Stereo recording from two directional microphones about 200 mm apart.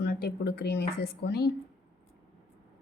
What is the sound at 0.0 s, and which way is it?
Speech, 50° left (ahead or behind).